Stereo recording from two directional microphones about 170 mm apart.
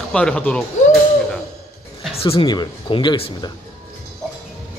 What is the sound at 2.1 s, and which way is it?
Speech, 35° left (ahead or behind).